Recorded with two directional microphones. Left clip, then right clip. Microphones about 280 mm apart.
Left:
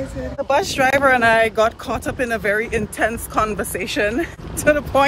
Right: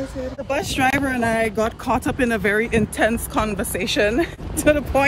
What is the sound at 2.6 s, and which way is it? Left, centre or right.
Speech, right.